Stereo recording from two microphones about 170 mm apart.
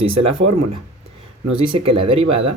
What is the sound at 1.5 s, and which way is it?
Speech, 30° right (ahead or behind).